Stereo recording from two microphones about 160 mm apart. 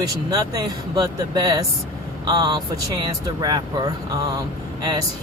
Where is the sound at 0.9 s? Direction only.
25° right (ahead or behind).